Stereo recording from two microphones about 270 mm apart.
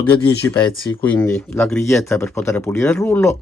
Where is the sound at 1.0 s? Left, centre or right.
Centre.